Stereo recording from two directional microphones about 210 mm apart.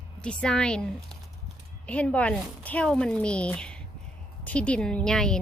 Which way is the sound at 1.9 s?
5° left (ahead or behind).